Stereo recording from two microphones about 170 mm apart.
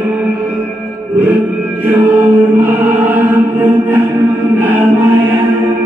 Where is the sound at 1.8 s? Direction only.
10° right (ahead or behind).